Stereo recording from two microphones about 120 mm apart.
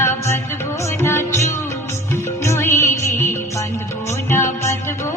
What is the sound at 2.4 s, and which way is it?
Music, 20° left (ahead or behind).